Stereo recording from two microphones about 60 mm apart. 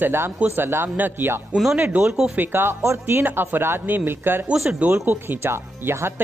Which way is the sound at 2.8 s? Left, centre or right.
Right.